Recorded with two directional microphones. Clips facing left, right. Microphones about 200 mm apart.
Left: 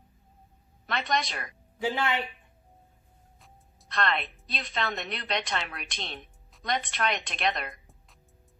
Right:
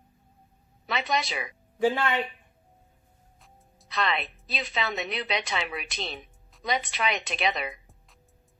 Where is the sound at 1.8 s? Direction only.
50° right (ahead or behind).